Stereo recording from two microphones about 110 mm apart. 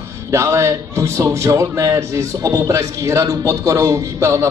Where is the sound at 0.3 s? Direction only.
25° right (ahead or behind).